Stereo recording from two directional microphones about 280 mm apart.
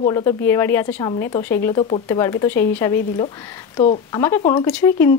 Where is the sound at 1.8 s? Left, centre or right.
Centre.